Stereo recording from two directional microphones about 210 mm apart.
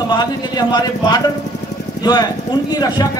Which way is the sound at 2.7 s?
15° left (ahead or behind).